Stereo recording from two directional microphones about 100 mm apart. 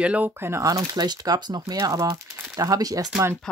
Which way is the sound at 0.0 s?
15° right (ahead or behind).